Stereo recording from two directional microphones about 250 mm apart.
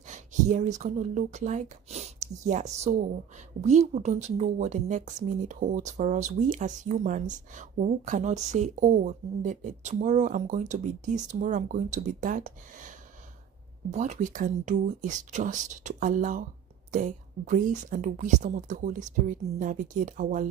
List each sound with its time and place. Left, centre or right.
0.1 s a woman's voice: right